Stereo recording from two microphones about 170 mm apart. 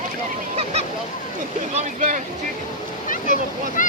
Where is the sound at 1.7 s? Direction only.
45° right (ahead or behind).